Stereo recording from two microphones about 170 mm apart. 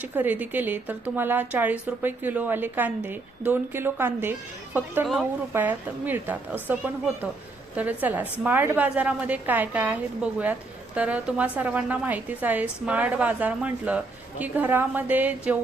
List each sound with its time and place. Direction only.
0.0 s a woman's voice: 10° right (ahead or behind)
5.0 s speech: centre (ahead or behind)
5.5 s a woman's voice: 10° right (ahead or behind)